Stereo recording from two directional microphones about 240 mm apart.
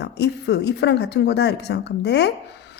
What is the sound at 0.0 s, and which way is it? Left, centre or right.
A woman's voice, left.